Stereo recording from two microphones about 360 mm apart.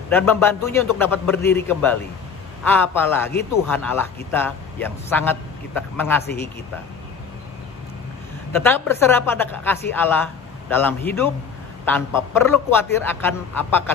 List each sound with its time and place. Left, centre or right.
0.1 s a man's voice: centre
8.6 s a man's voice: centre